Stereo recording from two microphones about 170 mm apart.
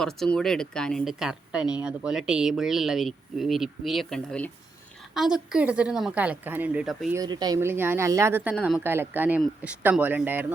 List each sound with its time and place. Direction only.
0.0 s speech: 5° left (ahead or behind)
7.1 s speech: 20° right (ahead or behind)
8.5 s speech: centre (ahead or behind)
8.8 s speech: 15° right (ahead or behind)